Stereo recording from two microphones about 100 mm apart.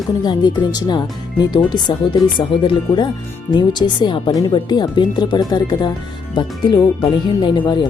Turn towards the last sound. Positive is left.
turn(degrees=50)  # may be behind; listen again after turning